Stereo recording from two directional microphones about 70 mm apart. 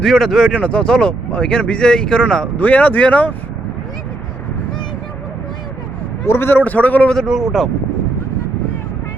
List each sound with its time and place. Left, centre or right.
0.0 s a man's voice: centre
0.5 s speech: centre
2.6 s speech: left
6.2 s a man's voice: left
6.7 s speech: left
7.1 s a man's voice: centre